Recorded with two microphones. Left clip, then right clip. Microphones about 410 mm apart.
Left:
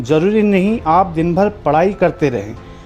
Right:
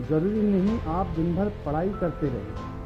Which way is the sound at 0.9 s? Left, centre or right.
Left.